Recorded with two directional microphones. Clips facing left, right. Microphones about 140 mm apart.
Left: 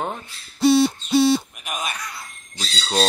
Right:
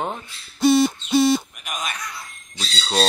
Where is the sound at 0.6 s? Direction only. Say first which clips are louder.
Even; 35° left (ahead or behind).